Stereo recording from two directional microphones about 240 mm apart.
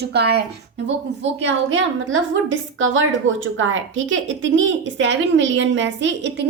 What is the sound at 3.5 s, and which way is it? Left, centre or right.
Speech, right.